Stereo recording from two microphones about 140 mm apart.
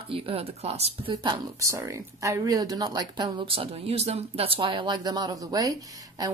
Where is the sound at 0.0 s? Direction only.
40° right (ahead or behind).